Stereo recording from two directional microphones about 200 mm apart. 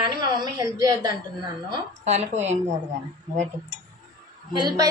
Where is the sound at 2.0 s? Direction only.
35° right (ahead or behind).